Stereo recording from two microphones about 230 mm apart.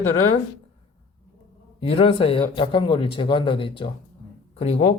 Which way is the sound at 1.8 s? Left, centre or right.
Left.